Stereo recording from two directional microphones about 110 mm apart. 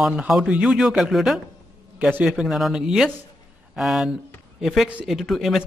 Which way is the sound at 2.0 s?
15° right (ahead or behind).